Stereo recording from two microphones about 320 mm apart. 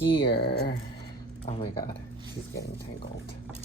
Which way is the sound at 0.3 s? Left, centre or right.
Left.